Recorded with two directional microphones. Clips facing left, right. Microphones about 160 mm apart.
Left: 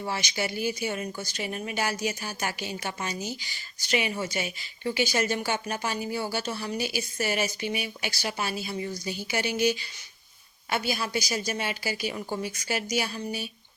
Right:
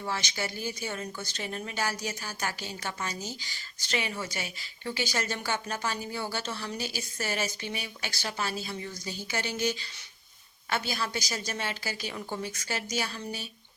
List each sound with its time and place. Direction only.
0.0 s a woman's voice: 15° left (ahead or behind)